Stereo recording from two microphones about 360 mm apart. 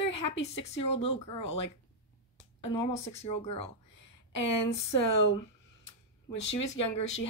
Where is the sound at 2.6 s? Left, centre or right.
Centre.